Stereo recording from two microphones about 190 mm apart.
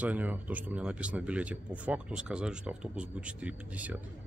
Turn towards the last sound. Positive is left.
turn(degrees=-5)  # may be behind; listen again after turning